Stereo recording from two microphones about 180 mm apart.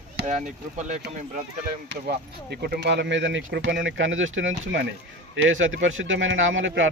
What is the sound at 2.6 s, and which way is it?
Speech, 65° right (ahead or behind).